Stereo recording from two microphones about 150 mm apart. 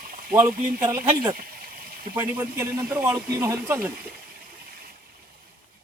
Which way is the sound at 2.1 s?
15° right (ahead or behind).